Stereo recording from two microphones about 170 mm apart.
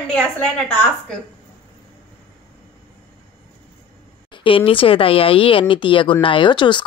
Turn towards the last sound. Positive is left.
turn(degrees=30)  # may be behind; listen again after turning